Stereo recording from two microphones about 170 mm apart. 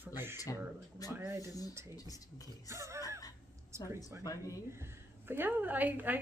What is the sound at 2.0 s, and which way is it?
Speech, 20° left (ahead or behind).